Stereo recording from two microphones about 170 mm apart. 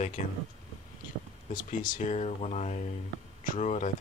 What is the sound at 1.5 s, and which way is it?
Speech, 55° left (ahead or behind).